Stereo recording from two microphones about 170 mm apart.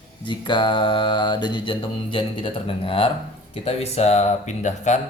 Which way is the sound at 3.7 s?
40° left (ahead or behind).